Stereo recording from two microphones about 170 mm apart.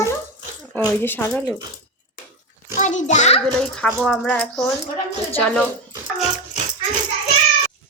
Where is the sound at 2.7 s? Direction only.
45° left (ahead or behind).